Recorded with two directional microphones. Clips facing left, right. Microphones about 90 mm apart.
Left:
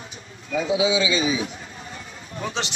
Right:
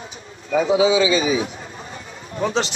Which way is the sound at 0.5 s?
35° right (ahead or behind).